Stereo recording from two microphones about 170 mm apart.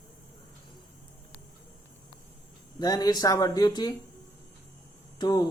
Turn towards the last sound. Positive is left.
turn(degrees=25)  # may be behind; listen again after turning